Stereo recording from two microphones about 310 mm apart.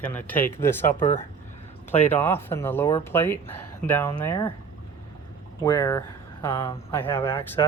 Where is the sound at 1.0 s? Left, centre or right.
Left.